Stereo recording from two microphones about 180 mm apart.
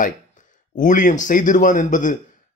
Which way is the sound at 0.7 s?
45° left (ahead or behind).